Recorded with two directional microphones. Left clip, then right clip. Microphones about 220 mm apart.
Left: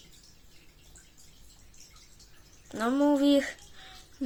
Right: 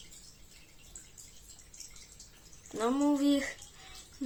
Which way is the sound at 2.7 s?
20° left (ahead or behind).